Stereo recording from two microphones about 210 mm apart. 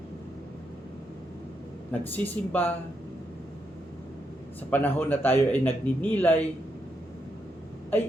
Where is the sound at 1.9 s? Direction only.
10° left (ahead or behind).